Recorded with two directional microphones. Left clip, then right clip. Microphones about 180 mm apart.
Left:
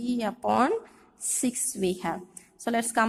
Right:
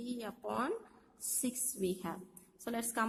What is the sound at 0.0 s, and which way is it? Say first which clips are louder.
A woman's voice: left 14 dB; 25° left (ahead or behind).